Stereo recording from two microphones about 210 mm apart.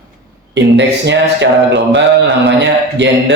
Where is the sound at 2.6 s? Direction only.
55° right (ahead or behind).